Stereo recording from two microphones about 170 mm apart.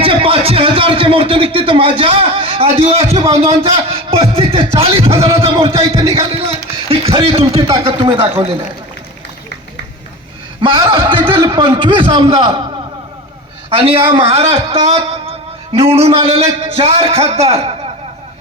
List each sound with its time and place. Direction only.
0.0 s a man's voice: 35° right (ahead or behind)
10.6 s a man's voice: 30° right (ahead or behind)
13.7 s a man's voice: 35° right (ahead or behind)